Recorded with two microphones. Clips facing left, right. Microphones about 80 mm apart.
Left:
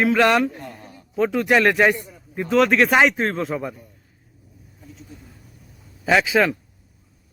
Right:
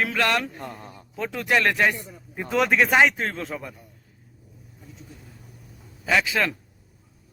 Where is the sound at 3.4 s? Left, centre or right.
Centre.